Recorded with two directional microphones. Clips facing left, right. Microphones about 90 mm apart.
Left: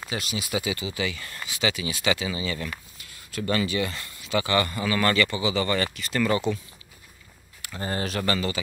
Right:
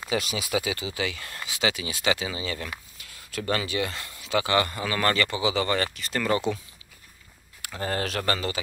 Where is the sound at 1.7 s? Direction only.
45° right (ahead or behind).